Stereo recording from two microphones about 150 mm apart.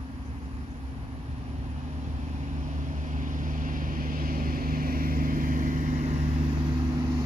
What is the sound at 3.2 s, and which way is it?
Vehicle, 60° right (ahead or behind).